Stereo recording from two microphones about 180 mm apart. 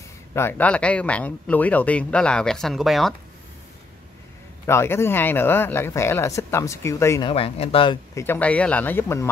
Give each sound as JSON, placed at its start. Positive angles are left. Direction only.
{"t": 0.3, "sound": "speech", "side_deg": 15}
{"t": 4.6, "sound": "speech", "side_deg": 15}
{"t": 7.2, "sound": "speech", "side_deg": 30}
{"t": 8.1, "sound": "speech", "side_deg": 15}